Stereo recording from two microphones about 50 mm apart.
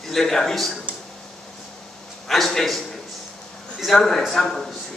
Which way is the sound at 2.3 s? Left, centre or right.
Centre.